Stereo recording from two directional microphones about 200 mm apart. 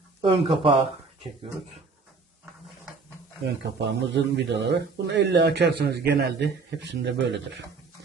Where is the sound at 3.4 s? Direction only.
60° right (ahead or behind).